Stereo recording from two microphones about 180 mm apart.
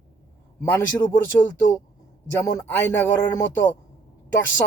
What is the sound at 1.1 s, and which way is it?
Speech, 10° left (ahead or behind).